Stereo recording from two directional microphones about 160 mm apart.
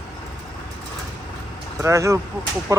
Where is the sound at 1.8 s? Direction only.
20° right (ahead or behind).